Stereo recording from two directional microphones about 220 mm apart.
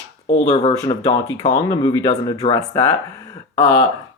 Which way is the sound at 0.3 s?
30° left (ahead or behind).